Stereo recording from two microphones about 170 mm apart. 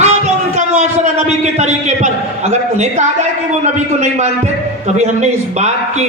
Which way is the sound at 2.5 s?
40° right (ahead or behind).